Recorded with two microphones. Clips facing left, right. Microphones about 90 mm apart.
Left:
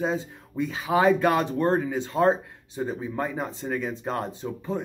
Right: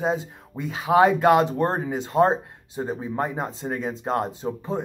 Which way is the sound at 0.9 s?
60° right (ahead or behind).